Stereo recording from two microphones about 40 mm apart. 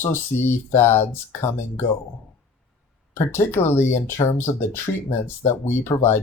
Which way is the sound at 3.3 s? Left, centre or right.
Left.